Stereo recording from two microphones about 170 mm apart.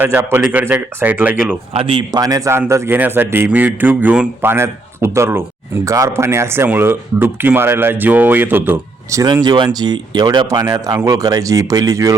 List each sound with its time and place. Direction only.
0.0 s a man's voice: 15° right (ahead or behind)
1.7 s a man's voice: 30° right (ahead or behind); by 9.2 s 10° right (ahead or behind)
9.2 s speech: 25° right (ahead or behind)